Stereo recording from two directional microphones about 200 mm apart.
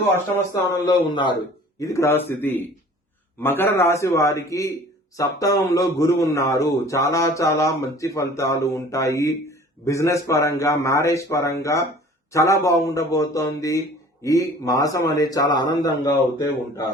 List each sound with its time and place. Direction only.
0.0 s a man's voice: 10° left (ahead or behind)